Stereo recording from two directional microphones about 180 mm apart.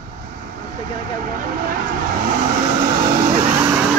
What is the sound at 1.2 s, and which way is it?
Vehicle, 50° right (ahead or behind).